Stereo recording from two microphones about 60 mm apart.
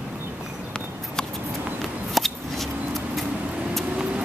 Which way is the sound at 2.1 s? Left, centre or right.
Centre.